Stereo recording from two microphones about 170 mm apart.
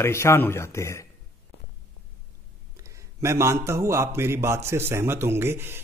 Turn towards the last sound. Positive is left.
turn(degrees=-15)  # may be behind; listen again after turning